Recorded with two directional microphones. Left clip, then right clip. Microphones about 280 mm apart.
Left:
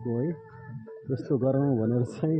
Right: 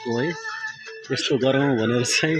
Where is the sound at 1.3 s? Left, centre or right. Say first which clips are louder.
Right 5 dB; right.